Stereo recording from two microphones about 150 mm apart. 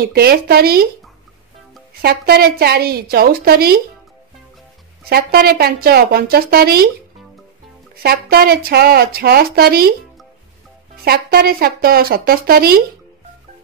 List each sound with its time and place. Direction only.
0.0 s speech: 90° right
2.0 s speech: 90° right
5.1 s speech: 90° right
7.9 s speech: 90° right
11.1 s a woman's voice: 90° right